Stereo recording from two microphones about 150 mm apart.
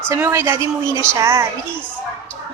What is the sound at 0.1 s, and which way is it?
Speech, 15° right (ahead or behind).